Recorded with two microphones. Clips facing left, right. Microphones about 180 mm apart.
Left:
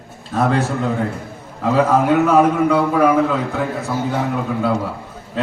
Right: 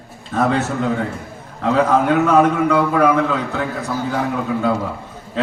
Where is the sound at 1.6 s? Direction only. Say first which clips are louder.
Even; 5° left (ahead or behind).